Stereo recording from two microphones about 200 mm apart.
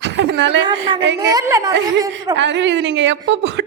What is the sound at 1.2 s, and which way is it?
Speech, 15° right (ahead or behind).